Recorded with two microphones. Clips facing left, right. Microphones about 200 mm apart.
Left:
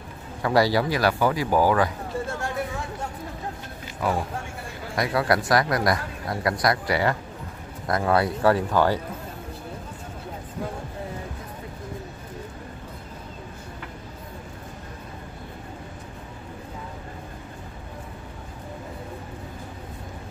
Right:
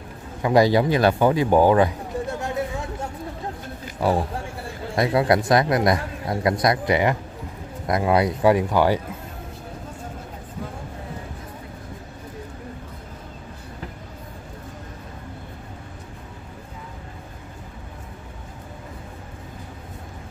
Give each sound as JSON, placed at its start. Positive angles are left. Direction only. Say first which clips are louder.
{"t": 0.4, "sound": "speech", "louder": "right 4 dB", "side_deg": -20}
{"t": 4.0, "sound": "speech", "louder": "right 4 dB", "side_deg": -30}